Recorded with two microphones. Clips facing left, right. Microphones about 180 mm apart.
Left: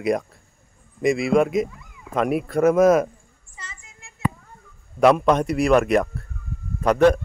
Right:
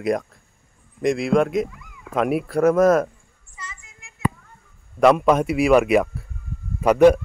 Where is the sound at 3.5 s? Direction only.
30° left (ahead or behind).